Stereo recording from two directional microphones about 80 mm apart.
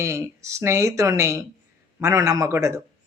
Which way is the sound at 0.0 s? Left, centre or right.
Right.